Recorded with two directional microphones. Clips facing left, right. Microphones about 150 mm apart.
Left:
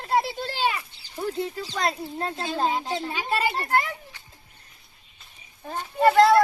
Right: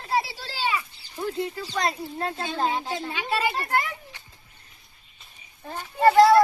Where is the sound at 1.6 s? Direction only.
Centre (ahead or behind).